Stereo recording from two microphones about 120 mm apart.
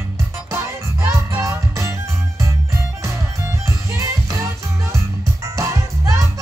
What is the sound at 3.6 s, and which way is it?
Music, 25° right (ahead or behind).